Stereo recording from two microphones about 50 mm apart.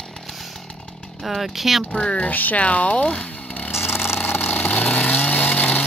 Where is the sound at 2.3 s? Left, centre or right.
Left.